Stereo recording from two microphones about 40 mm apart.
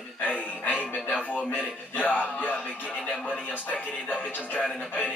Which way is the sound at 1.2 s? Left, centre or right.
Left.